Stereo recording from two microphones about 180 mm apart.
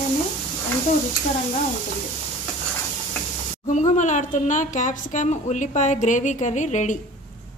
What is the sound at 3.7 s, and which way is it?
A woman's voice, 40° left (ahead or behind).